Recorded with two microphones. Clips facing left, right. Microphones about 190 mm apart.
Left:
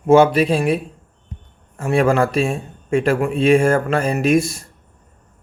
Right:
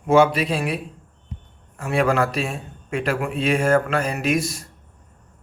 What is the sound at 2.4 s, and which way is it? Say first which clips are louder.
Speech: left 7 dB; 30° left (ahead or behind).